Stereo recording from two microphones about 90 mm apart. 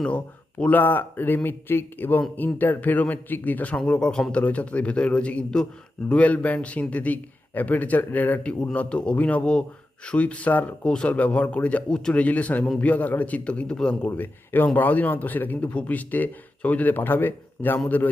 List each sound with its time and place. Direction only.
0.6 s a man's voice: 20° left (ahead or behind)
14.1 s speech: 20° left (ahead or behind)